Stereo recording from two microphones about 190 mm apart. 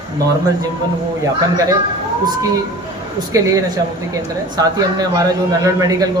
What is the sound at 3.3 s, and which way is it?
A man's voice, 20° right (ahead or behind).